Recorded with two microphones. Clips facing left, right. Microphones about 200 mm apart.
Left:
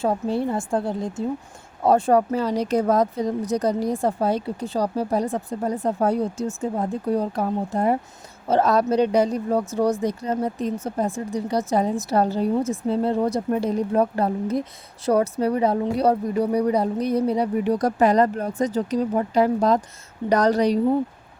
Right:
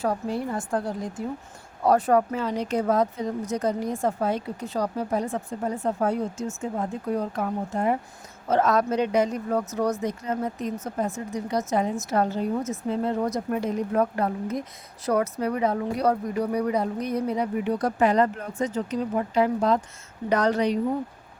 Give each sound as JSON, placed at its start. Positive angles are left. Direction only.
{"t": 0.0, "sound": "a woman's voice", "side_deg": 25}